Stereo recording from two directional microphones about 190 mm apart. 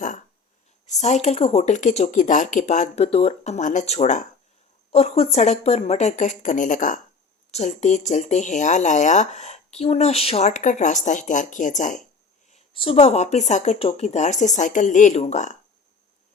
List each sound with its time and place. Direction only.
0.9 s speech: 35° left (ahead or behind)